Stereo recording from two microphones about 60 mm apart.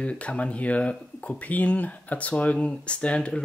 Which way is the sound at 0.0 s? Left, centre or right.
Left.